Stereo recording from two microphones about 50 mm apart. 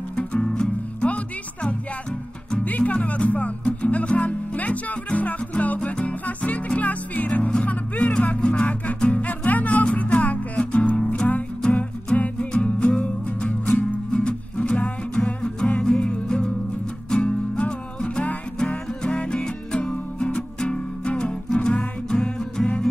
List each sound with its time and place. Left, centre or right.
0.1 s music: left